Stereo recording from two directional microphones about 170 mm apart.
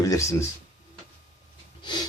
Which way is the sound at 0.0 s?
20° left (ahead or behind).